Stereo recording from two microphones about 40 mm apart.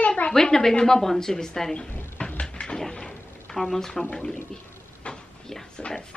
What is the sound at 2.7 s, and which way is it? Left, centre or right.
Drawer open or close, centre.